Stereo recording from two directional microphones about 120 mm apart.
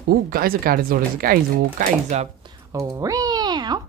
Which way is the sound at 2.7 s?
30° right (ahead or behind).